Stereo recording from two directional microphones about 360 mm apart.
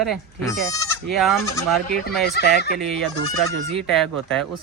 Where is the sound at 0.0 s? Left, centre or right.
Centre.